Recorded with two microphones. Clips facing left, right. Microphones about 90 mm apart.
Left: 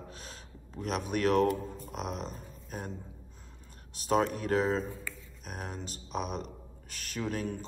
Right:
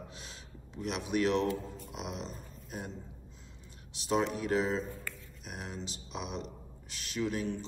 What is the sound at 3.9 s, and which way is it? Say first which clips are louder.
A man's voice: left 3 dB; 45° left (ahead or behind).